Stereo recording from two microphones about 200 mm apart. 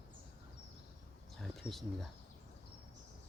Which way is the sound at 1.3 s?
Centre (ahead or behind).